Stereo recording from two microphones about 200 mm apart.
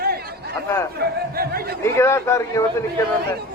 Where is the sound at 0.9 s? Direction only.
50° right (ahead or behind).